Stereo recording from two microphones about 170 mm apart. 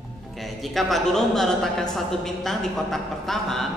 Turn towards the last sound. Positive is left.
turn(degrees=0)  # may be behind; listen again after turning